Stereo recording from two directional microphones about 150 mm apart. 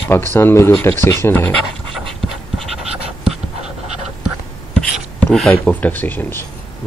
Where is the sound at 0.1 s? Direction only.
15° left (ahead or behind).